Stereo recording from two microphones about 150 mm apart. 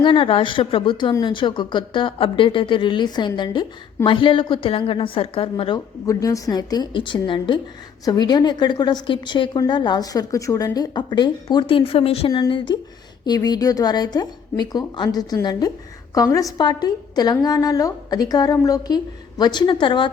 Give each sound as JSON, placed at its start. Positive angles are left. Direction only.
{"t": 0.0, "sound": "speech", "side_deg": 35}
{"t": 6.1, "sound": "a woman's voice", "side_deg": 20}